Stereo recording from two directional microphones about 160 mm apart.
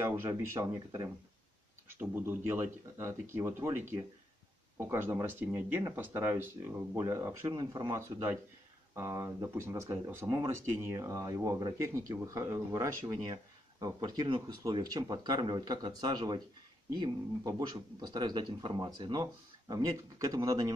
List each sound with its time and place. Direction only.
0.2 s speech: 20° right (ahead or behind)